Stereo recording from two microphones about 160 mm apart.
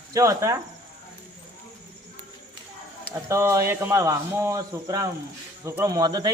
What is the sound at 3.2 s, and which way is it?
A man's voice, 15° right (ahead or behind).